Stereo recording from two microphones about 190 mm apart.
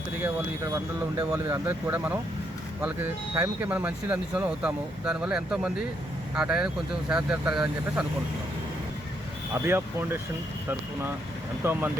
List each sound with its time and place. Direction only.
0.2 s speech: 15° right (ahead or behind)
9.6 s speech: 10° right (ahead or behind)
11.6 s speech: 10° right (ahead or behind)